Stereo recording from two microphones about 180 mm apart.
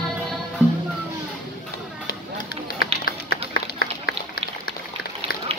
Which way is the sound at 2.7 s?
55° left (ahead or behind).